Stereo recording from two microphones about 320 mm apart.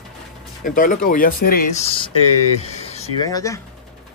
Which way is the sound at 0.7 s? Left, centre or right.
Left.